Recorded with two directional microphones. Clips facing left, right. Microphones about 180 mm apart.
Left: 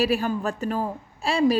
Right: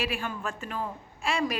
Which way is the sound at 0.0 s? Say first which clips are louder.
Left 9 dB; 40° left (ahead or behind).